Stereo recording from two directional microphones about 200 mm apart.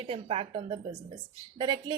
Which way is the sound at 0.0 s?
30° right (ahead or behind).